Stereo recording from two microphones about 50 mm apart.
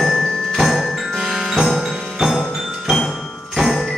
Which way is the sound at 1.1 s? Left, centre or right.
Centre.